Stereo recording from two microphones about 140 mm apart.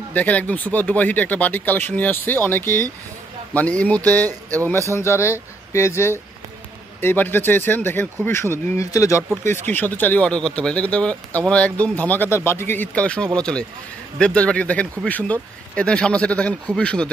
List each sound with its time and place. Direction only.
0.1 s speech: 10° left (ahead or behind)